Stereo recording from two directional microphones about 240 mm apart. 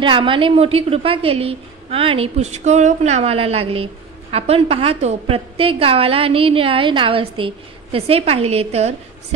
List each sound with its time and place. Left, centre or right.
0.0 s a woman's voice: right